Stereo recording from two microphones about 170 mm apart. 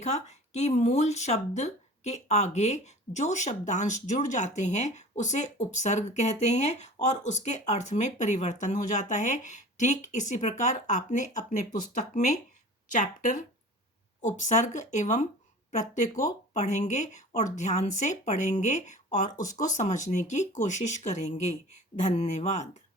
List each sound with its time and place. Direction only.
0.0 s speech: 40° left (ahead or behind)